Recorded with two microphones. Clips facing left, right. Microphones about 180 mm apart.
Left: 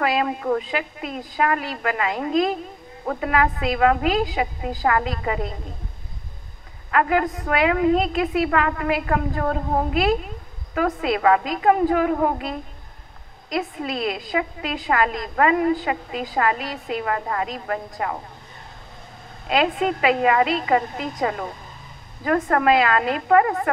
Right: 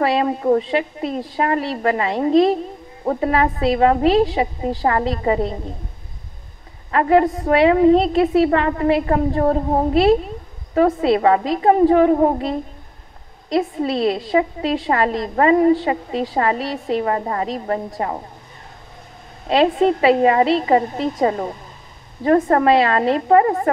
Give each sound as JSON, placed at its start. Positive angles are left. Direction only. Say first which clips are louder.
{"t": 0.0, "sound": "a woman's voice", "louder": "right 4 dB", "side_deg": -35}
{"t": 6.9, "sound": "a woman's voice", "louder": "right 5 dB", "side_deg": -30}
{"t": 19.4, "sound": "a woman's voice", "louder": "right 6 dB", "side_deg": -35}